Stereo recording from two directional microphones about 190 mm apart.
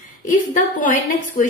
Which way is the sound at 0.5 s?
45° left (ahead or behind).